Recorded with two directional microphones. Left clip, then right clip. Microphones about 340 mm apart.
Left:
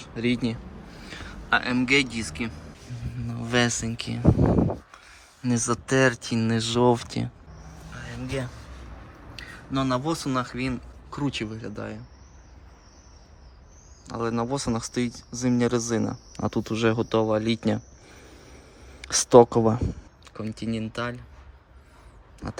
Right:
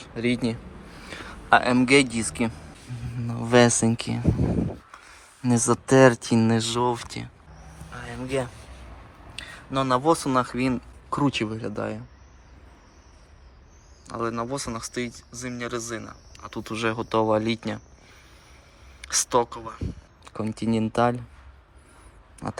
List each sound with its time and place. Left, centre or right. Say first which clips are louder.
0.0 s speech: right 1 dB; centre
7.9 s a sound: right 4 dB; centre
9.7 s speech: right 5 dB; centre
14.1 s speech: left 1 dB; centre
19.2 s speech: left 9 dB; centre